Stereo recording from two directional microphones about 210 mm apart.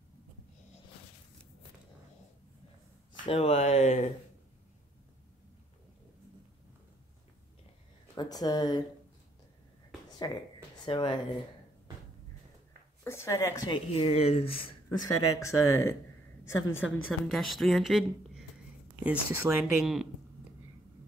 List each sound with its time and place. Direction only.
3.3 s speech: 30° left (ahead or behind)
8.1 s speech: 20° left (ahead or behind)
10.0 s a sound: 20° left (ahead or behind)
10.9 s speech: 20° left (ahead or behind)
13.0 s speech: 10° left (ahead or behind)
13.9 s speech: 30° left (ahead or behind)
15.0 s speech: 90° left
15.7 s speech: 15° left (ahead or behind)
16.4 s a woman's voice: 65° left (ahead or behind)
17.3 s speech: centre (ahead or behind)